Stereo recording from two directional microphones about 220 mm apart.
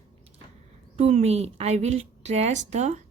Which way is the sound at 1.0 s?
30° right (ahead or behind).